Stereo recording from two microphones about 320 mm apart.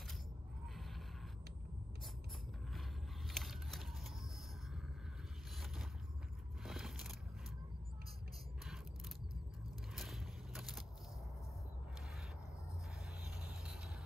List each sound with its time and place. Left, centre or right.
3.3 s vehicle: centre
6.6 s vehicle: centre
9.9 s vehicle: centre